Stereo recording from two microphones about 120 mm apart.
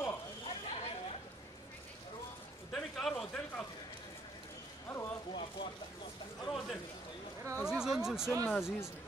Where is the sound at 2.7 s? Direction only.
5° left (ahead or behind).